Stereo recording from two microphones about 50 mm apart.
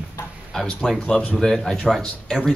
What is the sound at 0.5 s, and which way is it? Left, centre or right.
Speech, centre.